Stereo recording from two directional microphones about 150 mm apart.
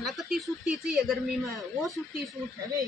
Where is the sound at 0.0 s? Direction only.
Centre (ahead or behind).